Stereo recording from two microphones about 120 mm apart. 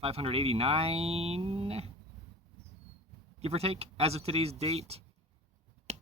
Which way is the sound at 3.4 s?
60° right (ahead or behind).